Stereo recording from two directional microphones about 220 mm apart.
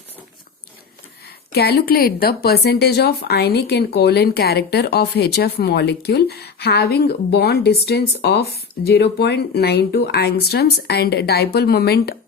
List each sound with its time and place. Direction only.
1.5 s a woman's voice: 45° left (ahead or behind)